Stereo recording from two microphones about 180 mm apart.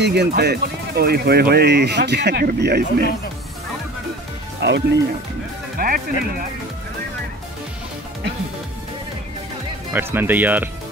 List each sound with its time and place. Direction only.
0.0 s speech: 65° right (ahead or behind)
4.6 s speech: 65° right (ahead or behind)
5.8 s speech: 50° right (ahead or behind)
9.9 s speech: 10° right (ahead or behind)